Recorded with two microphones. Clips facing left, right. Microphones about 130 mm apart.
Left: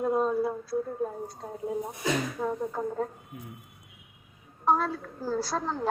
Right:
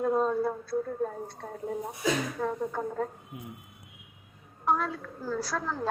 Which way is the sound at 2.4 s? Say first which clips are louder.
Even; 10° left (ahead or behind).